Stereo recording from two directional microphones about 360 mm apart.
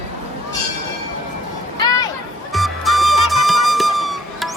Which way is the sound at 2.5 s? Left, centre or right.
Centre.